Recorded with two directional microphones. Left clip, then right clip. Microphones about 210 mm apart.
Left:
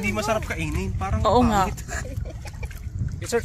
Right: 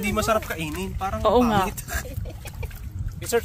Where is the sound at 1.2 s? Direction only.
5° right (ahead or behind).